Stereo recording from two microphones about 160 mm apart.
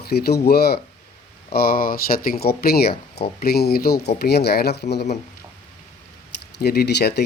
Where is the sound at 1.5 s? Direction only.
70° left (ahead or behind); by 5.1 s 90° left.